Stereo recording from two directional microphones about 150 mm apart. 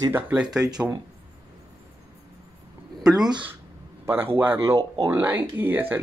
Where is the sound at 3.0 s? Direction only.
25° right (ahead or behind).